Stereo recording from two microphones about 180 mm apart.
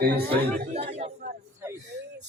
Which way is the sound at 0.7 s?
35° right (ahead or behind).